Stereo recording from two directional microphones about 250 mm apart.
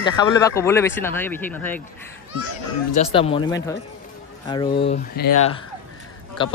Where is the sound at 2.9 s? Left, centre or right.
Left.